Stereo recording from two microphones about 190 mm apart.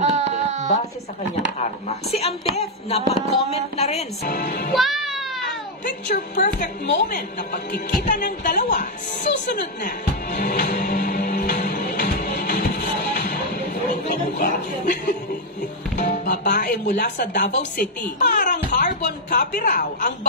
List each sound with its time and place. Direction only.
0.0 s a sound: 40° right (ahead or behind)
1.6 s speech: 35° left (ahead or behind)
4.2 s speech: 45° left (ahead or behind)
4.7 s music: centre (ahead or behind)
6.0 s speech: 45° left (ahead or behind)
6.6 s music: 45° left (ahead or behind)
14.3 s speech: 50° left (ahead or behind)